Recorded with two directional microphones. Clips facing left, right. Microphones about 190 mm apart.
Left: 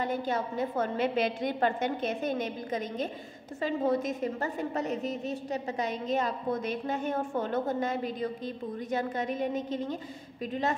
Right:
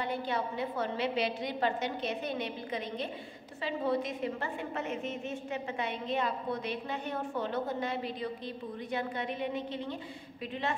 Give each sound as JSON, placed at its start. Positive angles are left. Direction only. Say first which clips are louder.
{"t": 0.0, "sound": "a woman's voice", "louder": "left 3 dB", "side_deg": 45}